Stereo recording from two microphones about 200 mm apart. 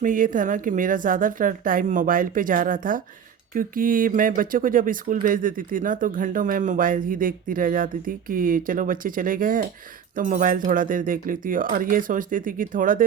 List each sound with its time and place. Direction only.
0.0 s speech: 40° right (ahead or behind)